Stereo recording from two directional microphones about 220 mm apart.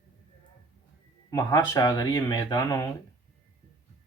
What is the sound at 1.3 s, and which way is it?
Speech, 15° left (ahead or behind).